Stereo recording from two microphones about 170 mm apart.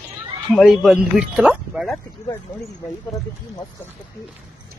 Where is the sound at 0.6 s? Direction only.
Centre (ahead or behind).